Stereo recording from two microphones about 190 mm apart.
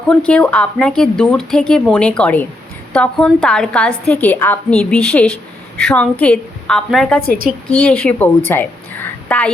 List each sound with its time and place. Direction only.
0.1 s a woman's voice: 5° left (ahead or behind)